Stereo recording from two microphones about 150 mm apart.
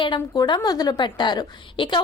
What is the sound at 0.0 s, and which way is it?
A woman's voice, 30° left (ahead or behind).